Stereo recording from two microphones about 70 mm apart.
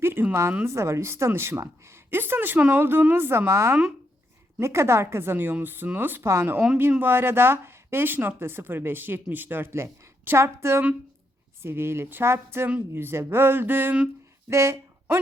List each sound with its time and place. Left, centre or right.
0.0 s a woman's voice: right
14.5 s speech: right